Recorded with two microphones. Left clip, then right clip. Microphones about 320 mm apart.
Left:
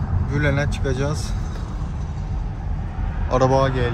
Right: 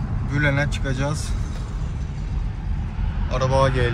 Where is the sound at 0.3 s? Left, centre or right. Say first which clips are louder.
Right 1 dB; centre.